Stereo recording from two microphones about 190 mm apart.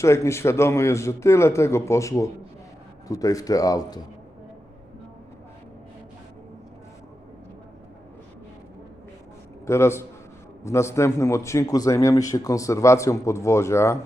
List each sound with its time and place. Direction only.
0.0 s a man's voice: 15° left (ahead or behind)
9.6 s a man's voice: 15° left (ahead or behind)